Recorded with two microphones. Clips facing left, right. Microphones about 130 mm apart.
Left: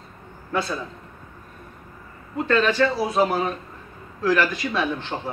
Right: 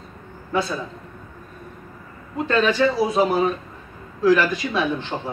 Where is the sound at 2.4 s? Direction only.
15° right (ahead or behind).